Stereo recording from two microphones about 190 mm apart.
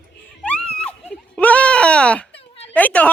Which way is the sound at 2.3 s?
30° left (ahead or behind).